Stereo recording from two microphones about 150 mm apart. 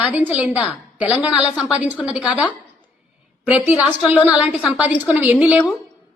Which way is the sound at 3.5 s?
10° right (ahead or behind).